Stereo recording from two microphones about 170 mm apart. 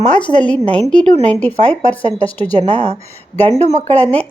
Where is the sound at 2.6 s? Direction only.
40° right (ahead or behind).